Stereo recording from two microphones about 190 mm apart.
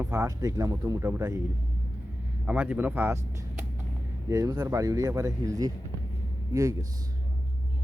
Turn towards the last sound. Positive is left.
turn(degrees=-15)  # may be behind; listen again after turning